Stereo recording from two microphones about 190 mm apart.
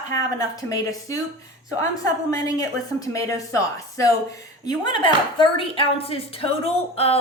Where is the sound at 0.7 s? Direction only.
15° left (ahead or behind).